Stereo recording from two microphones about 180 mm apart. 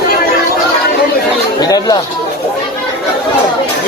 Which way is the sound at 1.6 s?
20° left (ahead or behind).